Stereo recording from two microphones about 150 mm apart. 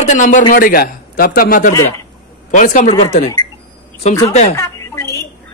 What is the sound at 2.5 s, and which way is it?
Speech, 60° left (ahead or behind).